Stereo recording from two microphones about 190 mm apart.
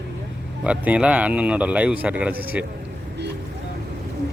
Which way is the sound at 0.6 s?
5° right (ahead or behind).